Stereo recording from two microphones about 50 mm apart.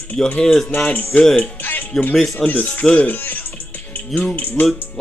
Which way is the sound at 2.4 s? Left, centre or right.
Left.